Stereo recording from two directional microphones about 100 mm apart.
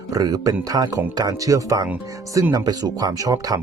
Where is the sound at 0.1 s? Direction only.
40° right (ahead or behind).